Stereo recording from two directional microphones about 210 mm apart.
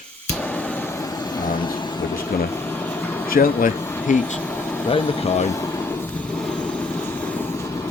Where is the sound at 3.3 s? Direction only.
40° left (ahead or behind).